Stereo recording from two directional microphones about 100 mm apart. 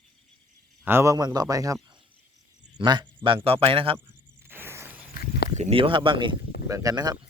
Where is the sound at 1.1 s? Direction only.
40° right (ahead or behind).